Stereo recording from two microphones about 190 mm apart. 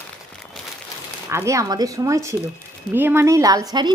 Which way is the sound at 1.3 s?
15° right (ahead or behind).